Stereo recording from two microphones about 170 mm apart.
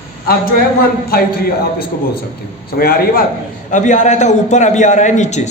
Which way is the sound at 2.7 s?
60° left (ahead or behind).